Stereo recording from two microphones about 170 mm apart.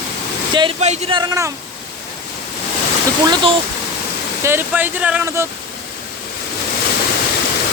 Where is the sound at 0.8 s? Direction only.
40° right (ahead or behind); by 1.5 s 20° right (ahead or behind).